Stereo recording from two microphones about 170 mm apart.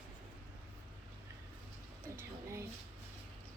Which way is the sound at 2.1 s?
15° right (ahead or behind).